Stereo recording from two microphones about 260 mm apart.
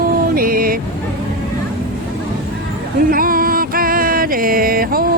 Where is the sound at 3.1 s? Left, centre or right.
Right.